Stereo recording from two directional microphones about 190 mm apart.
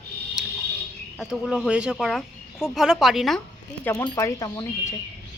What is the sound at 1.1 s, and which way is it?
Speech, centre (ahead or behind).